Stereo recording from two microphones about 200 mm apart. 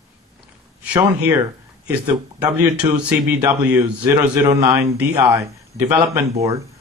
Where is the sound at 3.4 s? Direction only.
20° right (ahead or behind).